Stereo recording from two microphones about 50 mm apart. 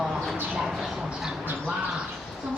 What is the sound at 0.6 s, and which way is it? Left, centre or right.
Speech, centre.